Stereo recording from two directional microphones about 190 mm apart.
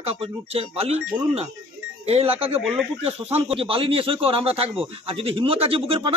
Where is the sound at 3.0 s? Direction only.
30° right (ahead or behind).